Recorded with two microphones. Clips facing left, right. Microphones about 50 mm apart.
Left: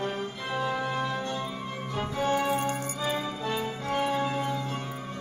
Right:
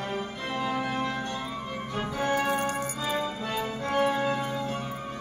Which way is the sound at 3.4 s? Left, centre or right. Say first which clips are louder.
Even; centre.